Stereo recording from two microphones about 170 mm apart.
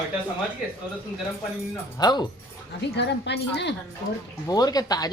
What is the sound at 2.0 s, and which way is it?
Speech, 25° left (ahead or behind).